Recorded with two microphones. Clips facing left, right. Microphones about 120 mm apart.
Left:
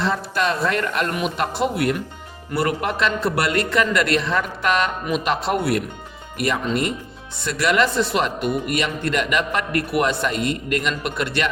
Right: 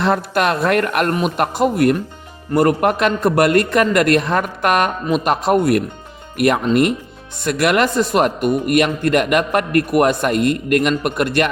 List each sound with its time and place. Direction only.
0.0 s speech: 60° right (ahead or behind)
1.1 s speech: 45° right (ahead or behind)